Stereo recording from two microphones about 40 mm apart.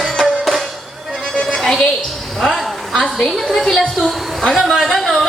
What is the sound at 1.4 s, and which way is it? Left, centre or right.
Music, centre.